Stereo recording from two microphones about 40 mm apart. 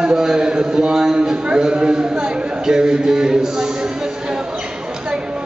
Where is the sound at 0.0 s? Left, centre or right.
Centre.